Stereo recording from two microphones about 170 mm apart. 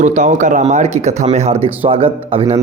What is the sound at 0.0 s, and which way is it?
Speech, 45° right (ahead or behind).